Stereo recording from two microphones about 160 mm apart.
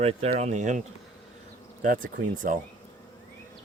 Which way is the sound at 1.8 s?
55° right (ahead or behind).